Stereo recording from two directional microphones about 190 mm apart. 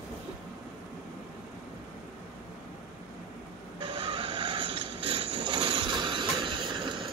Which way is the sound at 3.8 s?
25° right (ahead or behind).